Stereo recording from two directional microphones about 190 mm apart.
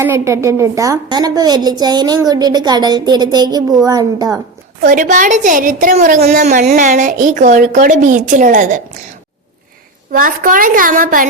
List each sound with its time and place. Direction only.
0.0 s a woman's voice: 15° right (ahead or behind)
4.8 s a woman's voice: 45° right (ahead or behind)
10.1 s a woman's voice: 45° right (ahead or behind)